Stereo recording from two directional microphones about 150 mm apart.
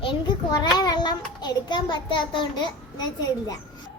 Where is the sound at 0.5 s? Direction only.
25° left (ahead or behind).